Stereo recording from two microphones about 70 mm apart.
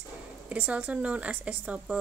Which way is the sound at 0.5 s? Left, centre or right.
Centre.